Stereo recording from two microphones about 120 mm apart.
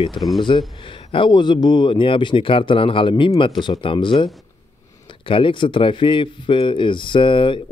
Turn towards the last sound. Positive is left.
turn(degrees=45)  # may be behind; listen again after turning